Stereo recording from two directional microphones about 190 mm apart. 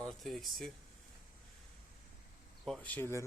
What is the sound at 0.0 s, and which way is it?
Speech, centre (ahead or behind).